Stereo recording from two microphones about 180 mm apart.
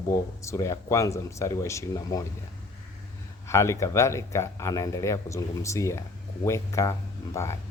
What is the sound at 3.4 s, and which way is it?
Speech, 15° left (ahead or behind).